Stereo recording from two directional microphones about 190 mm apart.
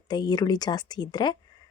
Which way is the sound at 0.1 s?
20° left (ahead or behind).